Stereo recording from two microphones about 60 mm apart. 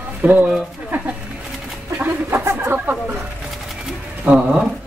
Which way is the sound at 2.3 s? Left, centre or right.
Right.